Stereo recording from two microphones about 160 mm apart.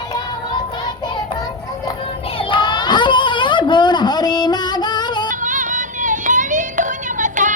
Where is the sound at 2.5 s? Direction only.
30° left (ahead or behind).